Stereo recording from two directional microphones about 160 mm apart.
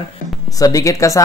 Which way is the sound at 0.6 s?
20° left (ahead or behind).